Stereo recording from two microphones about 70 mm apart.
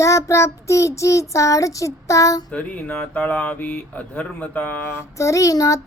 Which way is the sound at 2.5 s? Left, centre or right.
Centre.